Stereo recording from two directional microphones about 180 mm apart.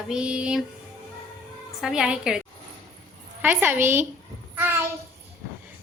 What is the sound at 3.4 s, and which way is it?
Speech, 10° right (ahead or behind).